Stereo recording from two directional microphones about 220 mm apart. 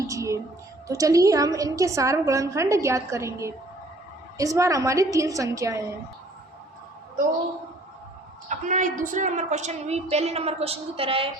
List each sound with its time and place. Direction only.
0.1 s a woman's voice: 15° right (ahead or behind)
8.4 s a woman's voice: 35° right (ahead or behind)